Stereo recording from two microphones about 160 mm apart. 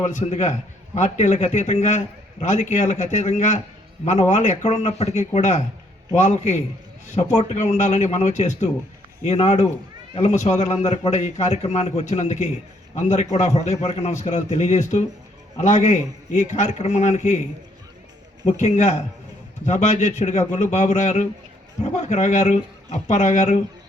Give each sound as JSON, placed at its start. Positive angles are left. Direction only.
{"t": 0.1, "sound": "a man's voice", "side_deg": 45}
{"t": 18.5, "sound": "a man's voice", "side_deg": 45}